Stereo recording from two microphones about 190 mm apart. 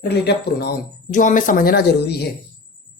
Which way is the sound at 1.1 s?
45° left (ahead or behind).